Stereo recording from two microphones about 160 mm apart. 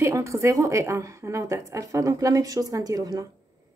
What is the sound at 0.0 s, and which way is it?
Speech, 20° right (ahead or behind).